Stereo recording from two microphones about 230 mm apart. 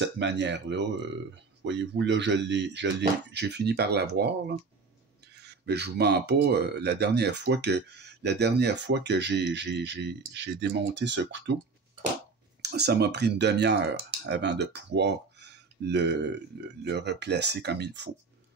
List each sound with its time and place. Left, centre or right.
0.0 s speech: right
12.6 s speech: right